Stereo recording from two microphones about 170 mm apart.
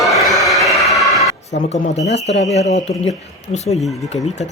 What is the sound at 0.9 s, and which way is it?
Music, centre (ahead or behind).